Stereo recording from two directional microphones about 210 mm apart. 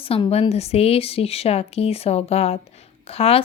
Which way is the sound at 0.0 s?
25° left (ahead or behind).